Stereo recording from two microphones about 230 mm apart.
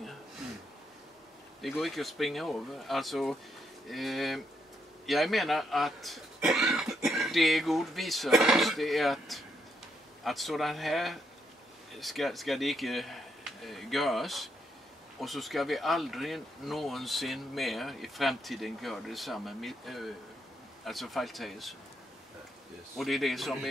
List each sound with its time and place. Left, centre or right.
1.6 s speech: centre
22.9 s speech: centre